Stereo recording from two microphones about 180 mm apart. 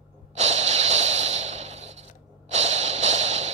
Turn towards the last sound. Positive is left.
turn(degrees=-40)  # may be behind; listen again after turning